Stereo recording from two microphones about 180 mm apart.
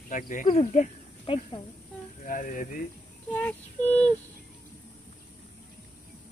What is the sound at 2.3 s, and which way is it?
Speech, 50° left (ahead or behind).